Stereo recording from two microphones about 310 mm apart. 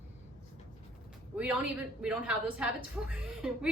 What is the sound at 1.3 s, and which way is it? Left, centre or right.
A woman's voice, centre.